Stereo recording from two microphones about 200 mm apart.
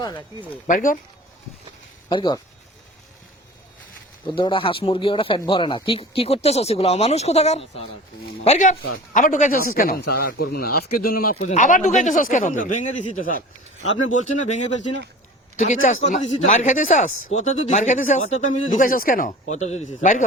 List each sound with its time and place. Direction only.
0.7 s a man's voice: 40° left (ahead or behind)
2.0 s speech: 20° left (ahead or behind)
4.4 s a man's voice: 25° left (ahead or behind)